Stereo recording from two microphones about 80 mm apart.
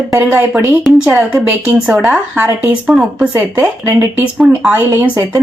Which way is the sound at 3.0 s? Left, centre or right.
Centre.